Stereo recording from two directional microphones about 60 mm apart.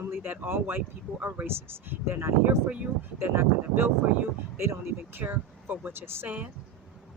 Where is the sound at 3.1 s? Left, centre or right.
Right.